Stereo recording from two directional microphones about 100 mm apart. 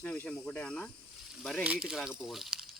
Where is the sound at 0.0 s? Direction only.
15° left (ahead or behind).